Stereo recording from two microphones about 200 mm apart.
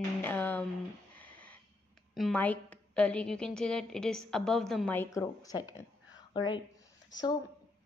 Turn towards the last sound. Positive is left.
turn(degrees=20)  # may be behind; listen again after turning